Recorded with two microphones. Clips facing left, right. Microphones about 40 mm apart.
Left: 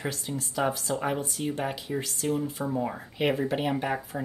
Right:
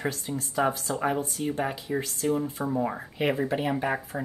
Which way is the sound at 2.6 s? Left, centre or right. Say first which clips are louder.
Right 2 dB; centre.